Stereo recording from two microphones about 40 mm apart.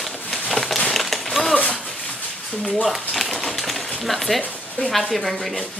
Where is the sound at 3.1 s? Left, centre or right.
Centre.